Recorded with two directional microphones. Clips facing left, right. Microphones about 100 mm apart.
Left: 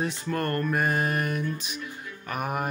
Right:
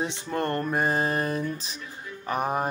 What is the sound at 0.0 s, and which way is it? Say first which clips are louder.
Music: even; 20° right (ahead or behind).